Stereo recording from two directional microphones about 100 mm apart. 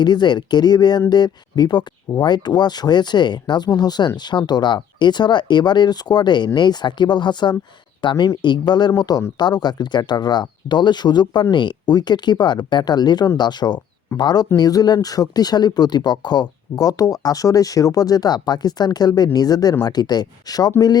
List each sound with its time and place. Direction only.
0.0 s speech: 45° left (ahead or behind)